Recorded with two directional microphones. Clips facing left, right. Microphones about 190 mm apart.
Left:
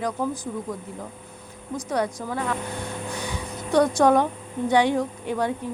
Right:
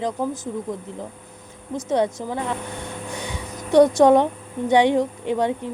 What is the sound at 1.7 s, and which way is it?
Speech, 25° right (ahead or behind).